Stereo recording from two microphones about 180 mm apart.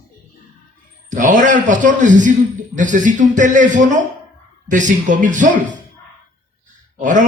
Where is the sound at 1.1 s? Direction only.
45° right (ahead or behind).